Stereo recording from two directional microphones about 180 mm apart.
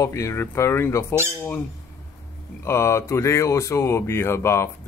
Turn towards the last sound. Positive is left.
turn(degrees=15)  # may be behind; listen again after turning